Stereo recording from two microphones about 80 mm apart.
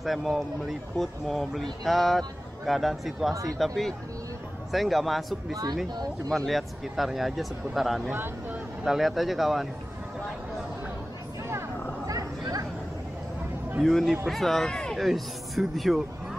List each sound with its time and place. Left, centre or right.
0.0 s speech: centre
6.3 s speech: centre
8.1 s speech: right
8.8 s speech: centre
12.1 s a sound: right
13.8 s speech: centre